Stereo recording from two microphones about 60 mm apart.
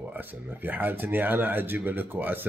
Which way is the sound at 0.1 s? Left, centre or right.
Right.